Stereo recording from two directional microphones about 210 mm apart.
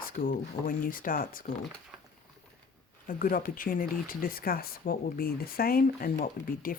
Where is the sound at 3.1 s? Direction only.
40° left (ahead or behind).